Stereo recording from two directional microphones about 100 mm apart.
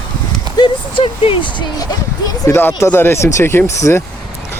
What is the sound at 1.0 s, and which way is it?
Speech, 60° left (ahead or behind).